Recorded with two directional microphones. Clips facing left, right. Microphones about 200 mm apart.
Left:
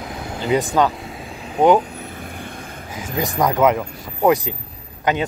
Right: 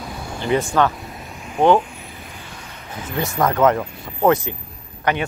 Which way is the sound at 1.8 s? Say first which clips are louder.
Left 5 dB; 40° left (ahead or behind).